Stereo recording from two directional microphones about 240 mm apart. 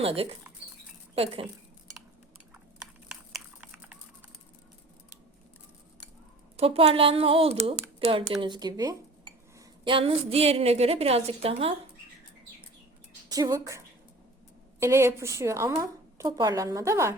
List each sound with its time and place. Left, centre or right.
0.0 s speech: right
2.8 s a sound: centre
6.6 s speech: right
13.2 s a woman's voice: centre